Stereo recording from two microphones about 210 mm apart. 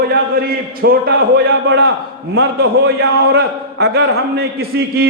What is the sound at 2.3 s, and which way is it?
A man's voice, 55° right (ahead or behind).